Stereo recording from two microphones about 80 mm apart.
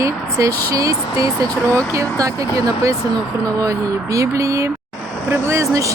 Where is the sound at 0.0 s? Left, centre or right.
Right.